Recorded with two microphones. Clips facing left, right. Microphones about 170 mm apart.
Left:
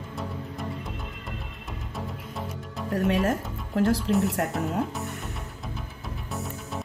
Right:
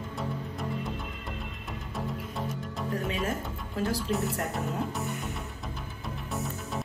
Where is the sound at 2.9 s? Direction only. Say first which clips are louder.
Left 8 dB; 75° left (ahead or behind).